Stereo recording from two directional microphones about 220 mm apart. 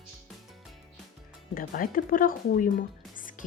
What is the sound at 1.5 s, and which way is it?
Speech, 40° left (ahead or behind).